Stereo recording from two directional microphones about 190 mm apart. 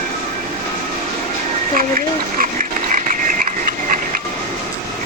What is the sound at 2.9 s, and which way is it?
Ratchet, 45° right (ahead or behind).